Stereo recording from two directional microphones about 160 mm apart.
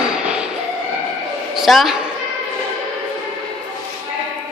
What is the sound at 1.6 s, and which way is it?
Speech, centre (ahead or behind).